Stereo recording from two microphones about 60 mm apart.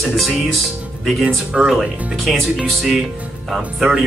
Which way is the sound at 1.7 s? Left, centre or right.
Centre.